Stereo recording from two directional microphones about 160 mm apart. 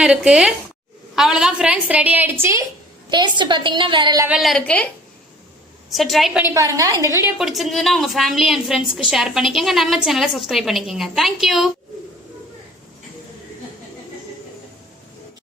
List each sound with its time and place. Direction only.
0.0 s a woman's voice: 5° right (ahead or behind)
3.1 s a woman's voice: 30° right (ahead or behind)
4.4 s a woman's voice: centre (ahead or behind)
5.9 s a woman's voice: centre (ahead or behind)
6.4 s a woman's voice: 20° right (ahead or behind)
7.3 s a woman's voice: centre (ahead or behind)